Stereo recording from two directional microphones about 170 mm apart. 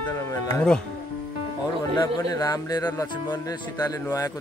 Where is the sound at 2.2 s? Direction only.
20° left (ahead or behind).